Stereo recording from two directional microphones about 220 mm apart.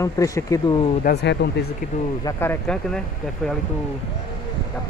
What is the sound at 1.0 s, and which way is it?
Speech, 50° left (ahead or behind).